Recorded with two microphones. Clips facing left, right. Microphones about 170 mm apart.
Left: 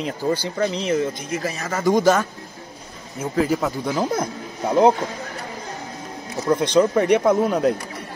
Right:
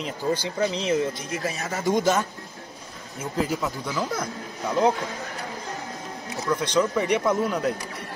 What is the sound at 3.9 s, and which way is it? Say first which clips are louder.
Speech: left 7 dB; 35° left (ahead or behind).